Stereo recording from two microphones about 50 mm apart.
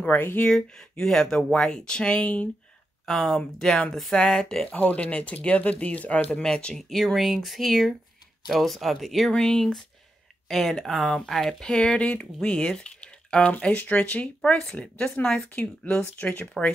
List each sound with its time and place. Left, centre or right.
0.0 s speech: left
0.5 s speech: centre
3.1 s speech: centre
3.9 s speech: centre
4.6 s speech: left
6.4 s speech: centre
7.2 s speech: centre
9.3 s speech: centre
13.7 s speech: left
15.5 s speech: left